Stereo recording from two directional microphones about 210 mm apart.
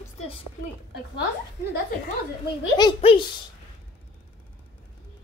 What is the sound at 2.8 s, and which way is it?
Speech, 25° left (ahead or behind).